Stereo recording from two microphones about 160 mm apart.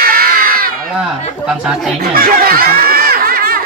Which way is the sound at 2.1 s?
65° right (ahead or behind).